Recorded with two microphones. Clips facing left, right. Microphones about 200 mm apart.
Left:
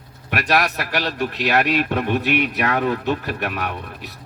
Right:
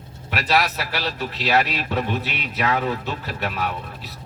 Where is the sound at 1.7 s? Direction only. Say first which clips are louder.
Left 5 dB; 55° left (ahead or behind).